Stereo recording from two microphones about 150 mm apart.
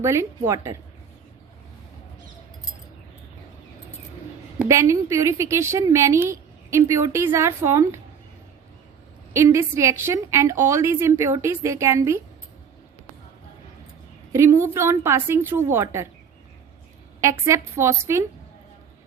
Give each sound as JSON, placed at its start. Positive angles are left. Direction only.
{"t": 0.0, "sound": "a woman's voice", "side_deg": -20}
{"t": 4.6, "sound": "a woman's voice", "side_deg": -20}
{"t": 9.3, "sound": "a woman's voice", "side_deg": -20}
{"t": 14.3, "sound": "a woman's voice", "side_deg": -20}
{"t": 17.2, "sound": "a woman's voice", "side_deg": -20}